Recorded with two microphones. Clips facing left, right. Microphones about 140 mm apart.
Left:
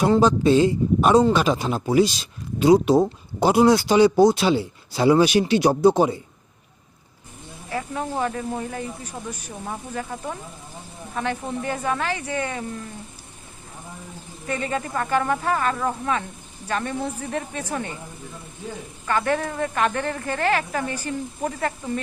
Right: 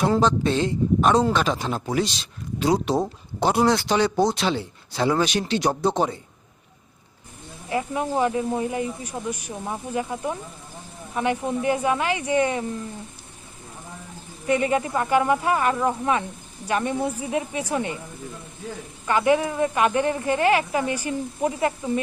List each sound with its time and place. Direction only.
0.0 s speech: 5° left (ahead or behind)
7.7 s speech: 15° right (ahead or behind)
14.4 s speech: 15° right (ahead or behind)
19.0 s speech: 15° right (ahead or behind)